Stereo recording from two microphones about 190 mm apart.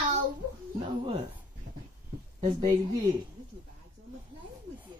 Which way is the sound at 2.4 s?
20° right (ahead or behind).